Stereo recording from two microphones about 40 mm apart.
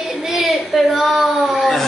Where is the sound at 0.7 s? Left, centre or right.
Centre.